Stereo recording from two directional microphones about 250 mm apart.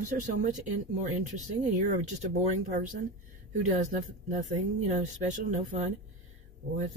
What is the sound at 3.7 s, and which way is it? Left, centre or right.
Speech, right.